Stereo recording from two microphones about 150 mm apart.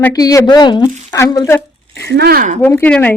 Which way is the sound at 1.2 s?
20° left (ahead or behind).